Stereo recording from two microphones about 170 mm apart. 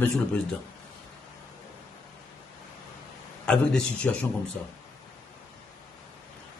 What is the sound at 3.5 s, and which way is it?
Speech, 5° left (ahead or behind).